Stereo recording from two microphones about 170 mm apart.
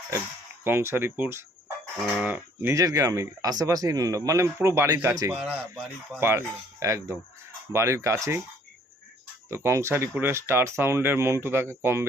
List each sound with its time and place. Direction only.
0.6 s speech: 15° right (ahead or behind)
5.3 s speech: 5° right (ahead or behind)
6.1 s speech: 15° right (ahead or behind)
9.5 s speech: 15° right (ahead or behind)